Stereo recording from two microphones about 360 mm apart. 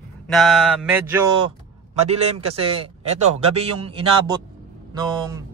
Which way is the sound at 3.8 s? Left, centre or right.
Centre.